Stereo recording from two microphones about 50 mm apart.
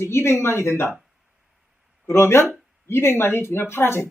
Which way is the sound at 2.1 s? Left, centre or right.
Left.